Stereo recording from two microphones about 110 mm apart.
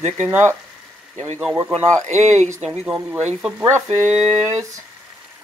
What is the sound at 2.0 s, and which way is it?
Speech, 90° right.